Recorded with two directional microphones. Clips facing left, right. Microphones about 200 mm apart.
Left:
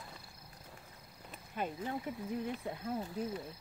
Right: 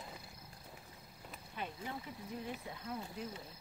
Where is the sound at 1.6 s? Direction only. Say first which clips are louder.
Left 6 dB; 45° left (ahead or behind).